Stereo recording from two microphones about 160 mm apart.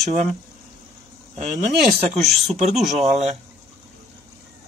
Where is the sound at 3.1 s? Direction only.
45° right (ahead or behind).